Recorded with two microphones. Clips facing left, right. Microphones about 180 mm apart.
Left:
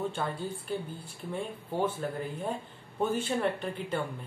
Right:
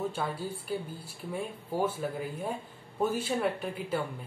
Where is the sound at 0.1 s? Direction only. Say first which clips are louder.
Even; 5° right (ahead or behind).